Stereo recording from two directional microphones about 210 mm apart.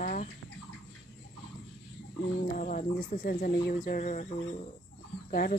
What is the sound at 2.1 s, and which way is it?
Speech, 45° left (ahead or behind).